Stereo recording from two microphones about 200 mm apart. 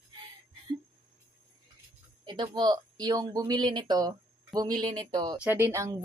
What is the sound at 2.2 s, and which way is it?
Speech, 20° right (ahead or behind).